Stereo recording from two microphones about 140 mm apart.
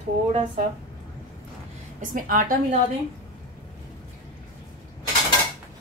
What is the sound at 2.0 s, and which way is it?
Speech, 75° right (ahead or behind).